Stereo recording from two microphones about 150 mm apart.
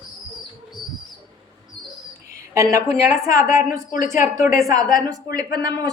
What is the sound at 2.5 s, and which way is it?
Speech, 20° right (ahead or behind).